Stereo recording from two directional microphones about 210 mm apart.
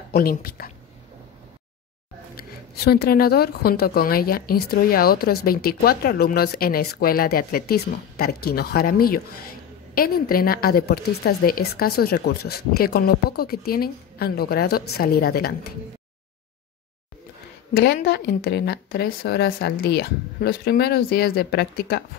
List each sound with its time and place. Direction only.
0.1 s a woman's voice: 45° left (ahead or behind)
2.3 s a woman's voice: 50° left (ahead or behind)
17.7 s a woman's voice: 50° left (ahead or behind)